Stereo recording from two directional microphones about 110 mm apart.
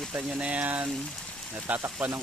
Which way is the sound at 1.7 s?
10° right (ahead or behind).